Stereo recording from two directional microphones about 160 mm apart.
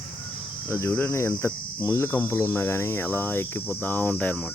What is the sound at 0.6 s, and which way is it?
Cricket, 15° left (ahead or behind).